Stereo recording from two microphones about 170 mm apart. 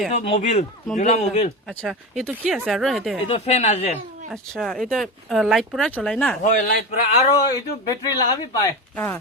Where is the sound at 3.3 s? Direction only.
35° left (ahead or behind).